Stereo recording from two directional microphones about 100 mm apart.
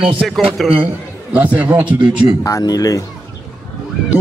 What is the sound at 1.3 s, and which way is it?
Speech, 15° right (ahead or behind).